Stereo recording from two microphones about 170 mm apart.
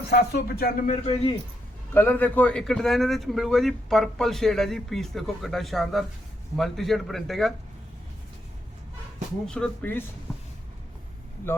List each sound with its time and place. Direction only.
0.1 s speech: 70° left (ahead or behind)
1.0 s speech: 30° left (ahead or behind)
1.9 s a man's voice: 10° left (ahead or behind)
9.5 s speech: 10° left (ahead or behind)